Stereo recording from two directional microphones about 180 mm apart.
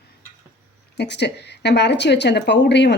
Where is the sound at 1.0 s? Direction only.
70° left (ahead or behind).